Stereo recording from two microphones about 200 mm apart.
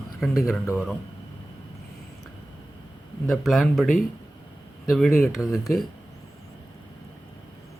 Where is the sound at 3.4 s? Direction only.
Centre (ahead or behind).